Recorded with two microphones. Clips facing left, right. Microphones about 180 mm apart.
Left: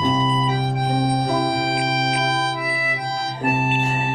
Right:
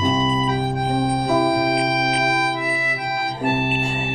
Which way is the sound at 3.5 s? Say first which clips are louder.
Even; 90° right.